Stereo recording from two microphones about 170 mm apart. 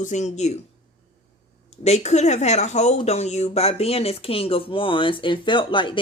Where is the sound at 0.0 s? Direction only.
45° left (ahead or behind).